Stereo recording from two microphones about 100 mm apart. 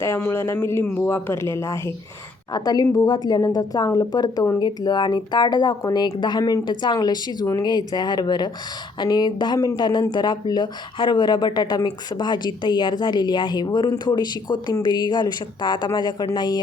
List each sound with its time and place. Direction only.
0.0 s speech: 25° left (ahead or behind)
2.5 s a woman's voice: 40° left (ahead or behind)